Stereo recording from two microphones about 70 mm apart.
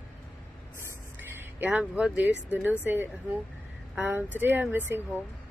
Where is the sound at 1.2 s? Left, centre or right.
Right.